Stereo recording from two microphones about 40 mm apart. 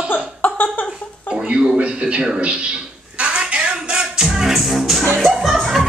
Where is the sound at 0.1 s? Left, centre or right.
Left.